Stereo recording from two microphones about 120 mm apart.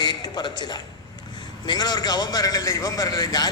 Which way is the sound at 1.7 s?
35° left (ahead or behind).